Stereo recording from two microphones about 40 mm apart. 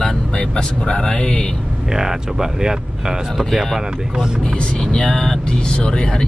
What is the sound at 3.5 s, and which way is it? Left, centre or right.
Speech, centre.